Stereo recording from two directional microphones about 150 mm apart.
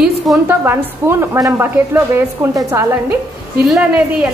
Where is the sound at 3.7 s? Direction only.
5° right (ahead or behind).